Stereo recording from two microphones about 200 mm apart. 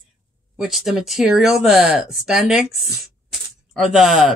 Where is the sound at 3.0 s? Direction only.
Centre (ahead or behind).